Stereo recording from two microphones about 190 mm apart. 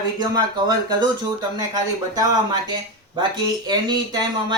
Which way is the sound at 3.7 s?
20° right (ahead or behind).